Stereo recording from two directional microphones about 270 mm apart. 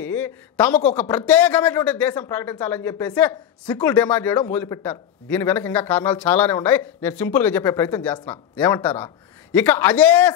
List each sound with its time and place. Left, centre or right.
0.0 s a man's voice: centre